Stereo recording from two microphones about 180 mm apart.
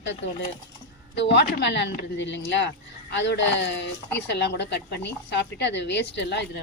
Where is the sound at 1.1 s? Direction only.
75° left (ahead or behind).